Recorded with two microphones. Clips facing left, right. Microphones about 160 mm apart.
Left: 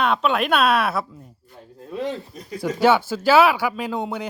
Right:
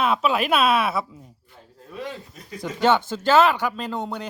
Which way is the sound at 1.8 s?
25° left (ahead or behind).